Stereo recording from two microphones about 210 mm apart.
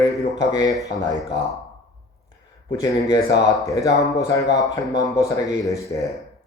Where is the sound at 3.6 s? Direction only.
15° left (ahead or behind).